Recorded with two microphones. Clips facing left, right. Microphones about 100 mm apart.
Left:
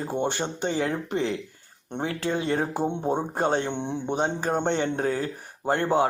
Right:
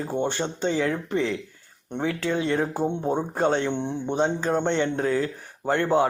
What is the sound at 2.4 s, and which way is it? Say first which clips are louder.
Speech: right 2 dB; 40° left (ahead or behind).